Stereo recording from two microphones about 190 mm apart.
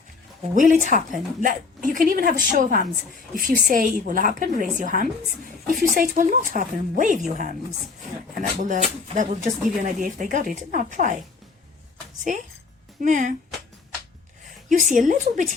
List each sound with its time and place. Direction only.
0.5 s a woman's voice: 45° right (ahead or behind)
12.3 s speech: 40° right (ahead or behind)
14.7 s a woman's voice: 45° right (ahead or behind)